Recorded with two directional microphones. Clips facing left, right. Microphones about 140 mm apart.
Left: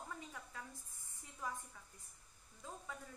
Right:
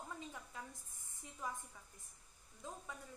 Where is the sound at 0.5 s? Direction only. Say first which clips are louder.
Right 1 dB; 20° right (ahead or behind).